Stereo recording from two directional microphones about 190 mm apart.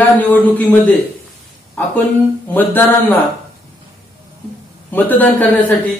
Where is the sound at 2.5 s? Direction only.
10° left (ahead or behind).